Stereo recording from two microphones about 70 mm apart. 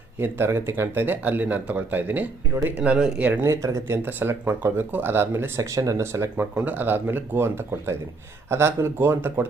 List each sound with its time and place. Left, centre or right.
0.2 s speech: right
3.4 s speech: right
6.3 s speech: right